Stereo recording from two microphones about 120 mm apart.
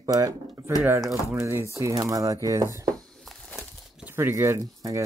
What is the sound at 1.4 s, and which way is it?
Speech, 25° right (ahead or behind).